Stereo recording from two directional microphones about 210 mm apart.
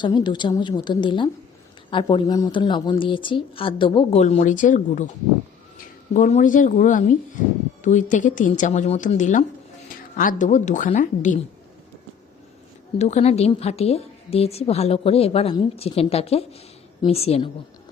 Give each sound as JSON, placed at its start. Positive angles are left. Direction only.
{"t": 0.0, "sound": "a woman's voice", "side_deg": 20}
{"t": 13.0, "sound": "a woman's voice", "side_deg": 30}